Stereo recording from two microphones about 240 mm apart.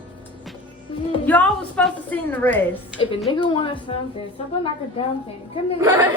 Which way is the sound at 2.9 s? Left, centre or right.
Centre.